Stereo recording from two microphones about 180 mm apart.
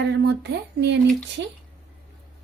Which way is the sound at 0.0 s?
70° right (ahead or behind).